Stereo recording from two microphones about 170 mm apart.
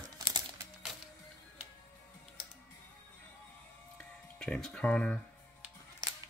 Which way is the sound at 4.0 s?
5° left (ahead or behind).